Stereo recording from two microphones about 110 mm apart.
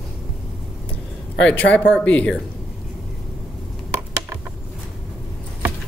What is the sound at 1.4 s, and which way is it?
Speech, 10° left (ahead or behind).